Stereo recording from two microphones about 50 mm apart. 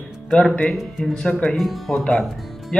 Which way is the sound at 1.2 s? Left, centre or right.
Left.